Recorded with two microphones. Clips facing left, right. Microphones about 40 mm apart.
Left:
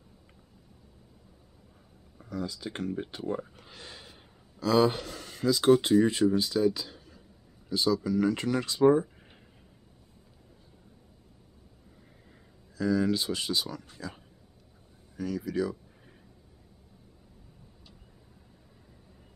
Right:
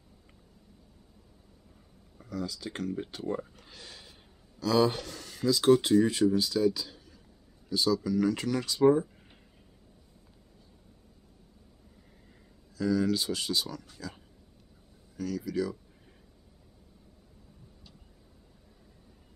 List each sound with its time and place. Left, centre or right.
2.1 s speech: centre
12.7 s speech: centre